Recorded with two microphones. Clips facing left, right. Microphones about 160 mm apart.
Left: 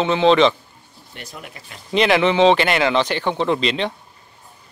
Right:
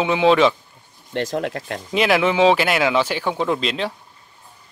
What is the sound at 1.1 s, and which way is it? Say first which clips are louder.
Speech: right 15 dB; 90° right.